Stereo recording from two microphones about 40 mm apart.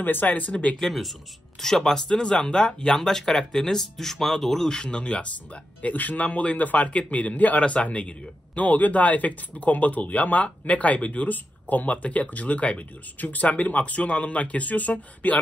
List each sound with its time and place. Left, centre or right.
0.0 s speech: left
0.5 s speech: left
1.6 s speech: centre
4.6 s speech: left
6.2 s speech: left